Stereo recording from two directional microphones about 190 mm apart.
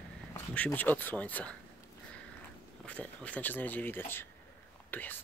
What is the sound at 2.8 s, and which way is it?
Speech, 5° left (ahead or behind).